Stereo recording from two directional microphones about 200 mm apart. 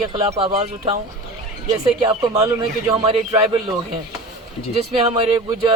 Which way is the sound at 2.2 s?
20° right (ahead or behind).